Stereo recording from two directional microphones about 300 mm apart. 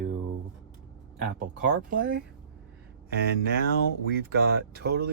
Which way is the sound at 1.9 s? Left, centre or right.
Right.